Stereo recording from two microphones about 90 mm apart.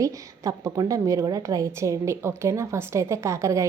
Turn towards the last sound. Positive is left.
turn(degrees=-35)  # may be behind; listen again after turning